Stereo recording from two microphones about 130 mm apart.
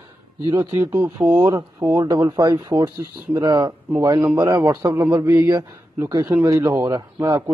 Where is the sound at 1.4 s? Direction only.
30° right (ahead or behind).